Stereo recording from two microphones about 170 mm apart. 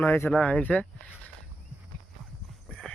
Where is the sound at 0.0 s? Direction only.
15° left (ahead or behind).